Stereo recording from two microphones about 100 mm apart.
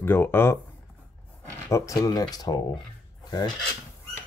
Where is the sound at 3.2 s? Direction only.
45° left (ahead or behind).